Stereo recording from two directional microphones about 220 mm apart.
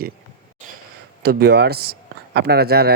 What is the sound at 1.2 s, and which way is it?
A man's voice, 45° right (ahead or behind).